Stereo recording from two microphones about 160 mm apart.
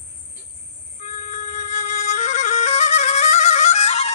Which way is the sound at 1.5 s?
45° left (ahead or behind).